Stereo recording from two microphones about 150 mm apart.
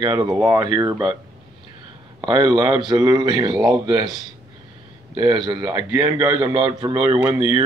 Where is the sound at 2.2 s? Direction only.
30° right (ahead or behind).